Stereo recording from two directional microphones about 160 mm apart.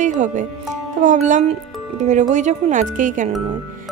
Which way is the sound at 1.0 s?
50° right (ahead or behind).